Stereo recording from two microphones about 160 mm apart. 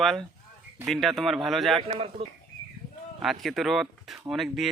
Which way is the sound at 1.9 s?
35° right (ahead or behind).